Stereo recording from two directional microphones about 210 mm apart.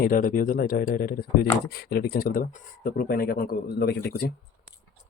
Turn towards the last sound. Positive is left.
turn(degrees=50)  # may be behind; listen again after turning